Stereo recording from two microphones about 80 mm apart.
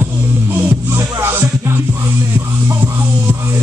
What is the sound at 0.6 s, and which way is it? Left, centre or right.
Music, right.